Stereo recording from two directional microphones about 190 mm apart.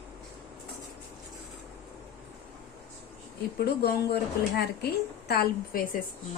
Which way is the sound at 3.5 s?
60° left (ahead or behind).